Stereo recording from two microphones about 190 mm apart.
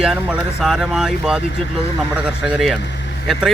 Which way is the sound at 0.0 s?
Centre (ahead or behind).